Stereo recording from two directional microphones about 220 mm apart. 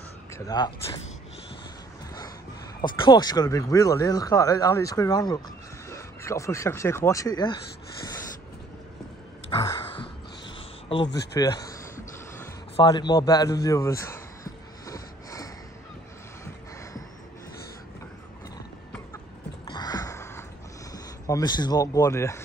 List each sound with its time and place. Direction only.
0.3 s speech: 20° left (ahead or behind)
2.8 s speech: 20° left (ahead or behind)
9.6 s dog: 25° left (ahead or behind)
11.1 s a sound: 15° left (ahead or behind)
19.6 s a sound: 20° left (ahead or behind)
20.9 s speech: 15° left (ahead or behind)